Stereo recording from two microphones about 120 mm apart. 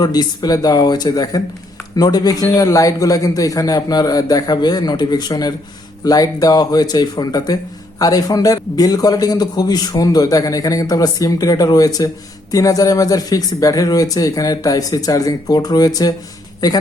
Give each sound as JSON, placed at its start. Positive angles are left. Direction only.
{"t": 0.0, "sound": "speech", "side_deg": 35}